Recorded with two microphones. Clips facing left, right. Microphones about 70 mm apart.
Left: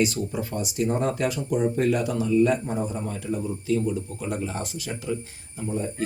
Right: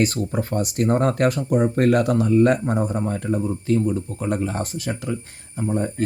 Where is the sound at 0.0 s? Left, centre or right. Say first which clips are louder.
Right 3 dB; right.